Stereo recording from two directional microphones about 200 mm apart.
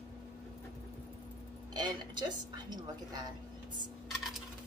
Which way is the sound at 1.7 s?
20° right (ahead or behind).